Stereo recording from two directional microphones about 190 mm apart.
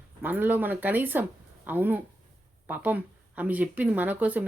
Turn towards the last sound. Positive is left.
turn(degrees=-10)  # may be behind; listen again after turning